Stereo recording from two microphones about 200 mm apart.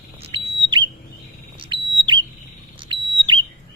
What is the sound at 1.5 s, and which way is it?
Bird, 25° right (ahead or behind).